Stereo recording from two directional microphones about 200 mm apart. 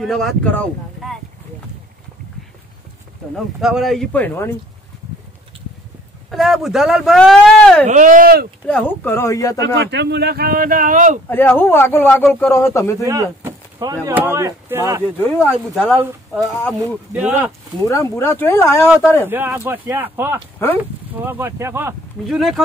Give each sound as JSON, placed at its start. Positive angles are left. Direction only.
{"t": 0.0, "sound": "speech", "side_deg": 0}
{"t": 3.6, "sound": "speech", "side_deg": 0}
{"t": 6.3, "sound": "speech", "side_deg": 0}
{"t": 7.8, "sound": "speech", "side_deg": -40}
{"t": 8.6, "sound": "speech", "side_deg": 10}
{"t": 9.8, "sound": "speech", "side_deg": -60}
{"t": 11.2, "sound": "speech", "side_deg": 10}
{"t": 13.0, "sound": "a sound", "side_deg": -15}
{"t": 14.0, "sound": "speech", "side_deg": -10}
{"t": 15.1, "sound": "speech", "side_deg": 10}
{"t": 17.1, "sound": "speech", "side_deg": -5}
{"t": 17.8, "sound": "speech", "side_deg": 15}
{"t": 19.2, "sound": "speech", "side_deg": -10}
{"t": 22.2, "sound": "speech", "side_deg": 0}